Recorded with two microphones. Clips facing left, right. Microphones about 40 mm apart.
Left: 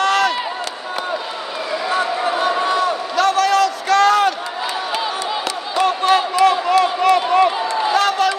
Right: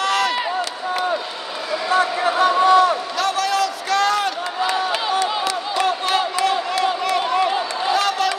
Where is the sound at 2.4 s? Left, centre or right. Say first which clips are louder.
Right 6 dB; centre.